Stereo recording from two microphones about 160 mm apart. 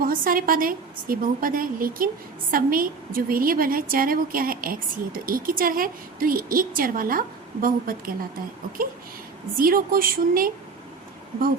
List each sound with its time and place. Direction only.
0.0 s a woman's voice: 60° right (ahead or behind)
9.6 s a woman's voice: 65° right (ahead or behind)